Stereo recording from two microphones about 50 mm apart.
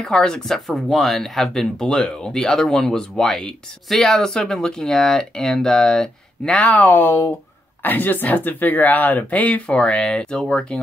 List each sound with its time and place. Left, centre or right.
0.0 s speech: centre
6.5 s speech: left
7.0 s speech: left
7.8 s speech: left
9.7 s speech: left